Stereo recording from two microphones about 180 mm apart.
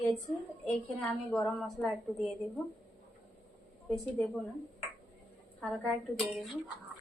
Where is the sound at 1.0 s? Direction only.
5° left (ahead or behind).